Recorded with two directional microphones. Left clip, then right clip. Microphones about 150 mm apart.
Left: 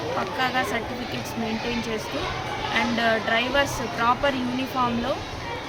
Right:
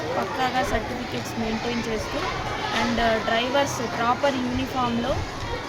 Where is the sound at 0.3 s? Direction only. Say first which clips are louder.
Even; centre (ahead or behind).